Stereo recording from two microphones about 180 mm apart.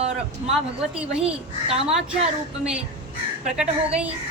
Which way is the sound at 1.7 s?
35° right (ahead or behind).